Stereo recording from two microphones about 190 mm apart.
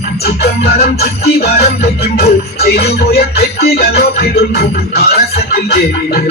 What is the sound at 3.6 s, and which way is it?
Music, 60° left (ahead or behind).